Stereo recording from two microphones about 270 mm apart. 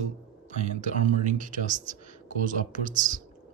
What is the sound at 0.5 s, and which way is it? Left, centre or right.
Speech, right.